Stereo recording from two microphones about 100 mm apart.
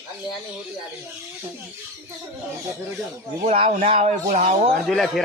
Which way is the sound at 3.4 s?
85° right.